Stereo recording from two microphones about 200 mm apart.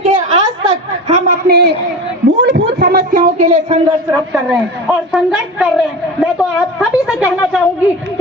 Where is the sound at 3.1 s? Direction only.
35° right (ahead or behind).